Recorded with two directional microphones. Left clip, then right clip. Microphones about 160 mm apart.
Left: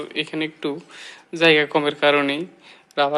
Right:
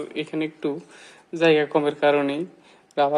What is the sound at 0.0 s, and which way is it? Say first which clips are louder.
Speech: left 2 dB; 5° right (ahead or behind).